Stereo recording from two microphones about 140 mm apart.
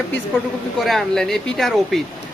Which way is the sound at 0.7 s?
Centre (ahead or behind).